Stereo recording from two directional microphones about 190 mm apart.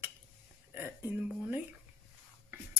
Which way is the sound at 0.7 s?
10° right (ahead or behind).